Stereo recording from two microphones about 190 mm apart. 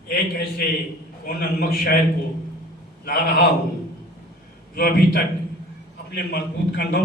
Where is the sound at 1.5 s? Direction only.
50° left (ahead or behind).